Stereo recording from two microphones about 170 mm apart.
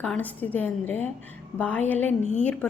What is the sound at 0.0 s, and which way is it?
A woman's voice, 5° left (ahead or behind).